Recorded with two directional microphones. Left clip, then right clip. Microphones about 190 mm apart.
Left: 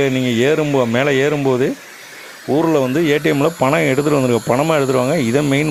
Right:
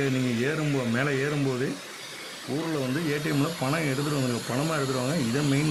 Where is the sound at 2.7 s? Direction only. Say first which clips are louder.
Left 12 dB; 50° left (ahead or behind).